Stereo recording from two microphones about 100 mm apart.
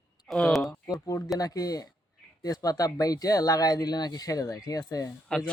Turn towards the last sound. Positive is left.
turn(degrees=35)  # may be behind; listen again after turning